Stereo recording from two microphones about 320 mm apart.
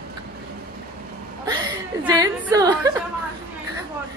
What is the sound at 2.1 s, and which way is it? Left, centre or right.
Speech, centre.